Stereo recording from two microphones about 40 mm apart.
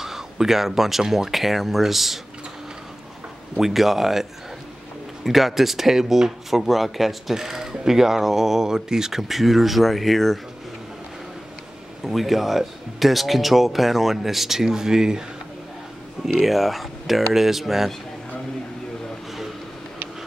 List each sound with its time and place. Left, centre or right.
0.0 s speech: centre
3.5 s speech: centre
12.0 s speech: centre
16.3 s speech: centre